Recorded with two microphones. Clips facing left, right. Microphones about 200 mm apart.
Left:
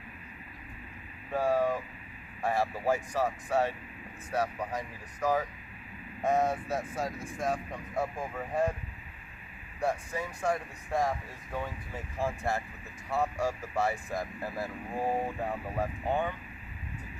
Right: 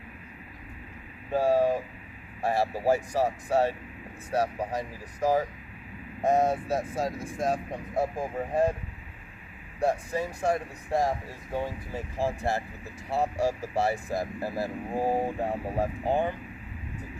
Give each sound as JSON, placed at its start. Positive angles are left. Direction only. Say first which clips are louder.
{"t": 1.3, "sound": "speech", "louder": "right 4 dB", "side_deg": -35}
{"t": 9.8, "sound": "speech", "louder": "right 5 dB", "side_deg": -35}